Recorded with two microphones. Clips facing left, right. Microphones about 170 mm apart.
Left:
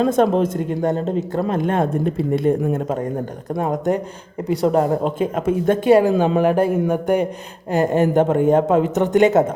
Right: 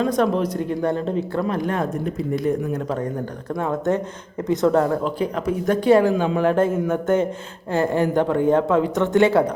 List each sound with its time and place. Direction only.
0.0 s speech: 25° left (ahead or behind)
1.3 s speech: 40° left (ahead or behind)
1.5 s speech: 25° left (ahead or behind)
3.6 s speech: 15° left (ahead or behind)
6.1 s speech: 45° left (ahead or behind)
6.4 s speech: 10° left (ahead or behind)